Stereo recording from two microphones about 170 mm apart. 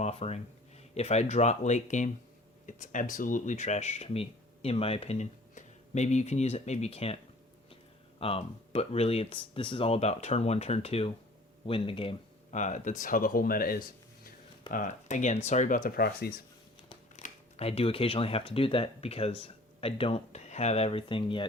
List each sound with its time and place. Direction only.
0.0 s speech: 40° left (ahead or behind)
8.2 s speech: 35° left (ahead or behind)
12.5 s speech: 45° left (ahead or behind)
14.7 s speech: 50° left (ahead or behind)
17.2 s speech: 40° left (ahead or behind)